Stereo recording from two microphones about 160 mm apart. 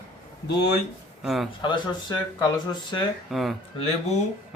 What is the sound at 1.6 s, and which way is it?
Speech, 30° left (ahead or behind).